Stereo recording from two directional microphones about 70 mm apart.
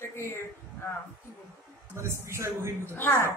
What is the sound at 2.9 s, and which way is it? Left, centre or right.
Speech, left.